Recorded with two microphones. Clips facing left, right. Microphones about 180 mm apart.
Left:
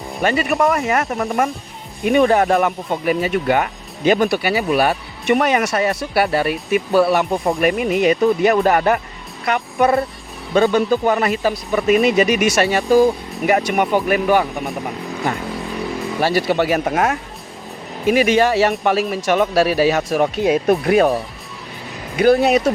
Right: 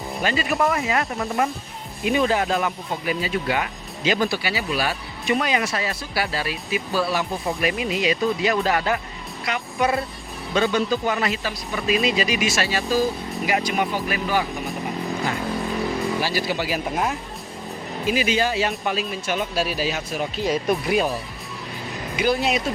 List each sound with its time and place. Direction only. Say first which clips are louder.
0.2 s speech: left 5 dB; 60° left (ahead or behind)
2.0 s speech: left 7 dB; 60° left (ahead or behind)
15.4 s vehicle: even; centre (ahead or behind)
16.2 s speech: left 8 dB; 60° left (ahead or behind); by 17.2 s 80° left
18.1 s speech: left 8 dB; 60° left (ahead or behind)
22.2 s speech: left 8 dB; 55° left (ahead or behind)